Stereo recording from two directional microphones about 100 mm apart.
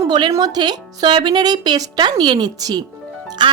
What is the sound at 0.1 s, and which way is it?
Speech, 40° right (ahead or behind).